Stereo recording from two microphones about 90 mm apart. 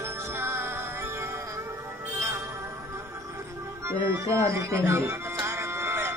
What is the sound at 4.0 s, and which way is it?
Music, 35° right (ahead or behind).